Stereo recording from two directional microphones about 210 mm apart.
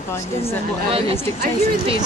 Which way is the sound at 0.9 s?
25° right (ahead or behind).